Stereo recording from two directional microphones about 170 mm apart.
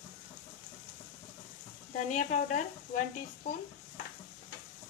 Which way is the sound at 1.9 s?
45° left (ahead or behind).